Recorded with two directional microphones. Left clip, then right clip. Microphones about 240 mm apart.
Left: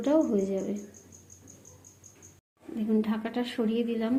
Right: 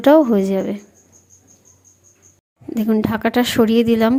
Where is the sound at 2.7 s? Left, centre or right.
Right.